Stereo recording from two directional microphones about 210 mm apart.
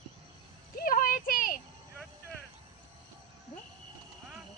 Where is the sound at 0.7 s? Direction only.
40° left (ahead or behind).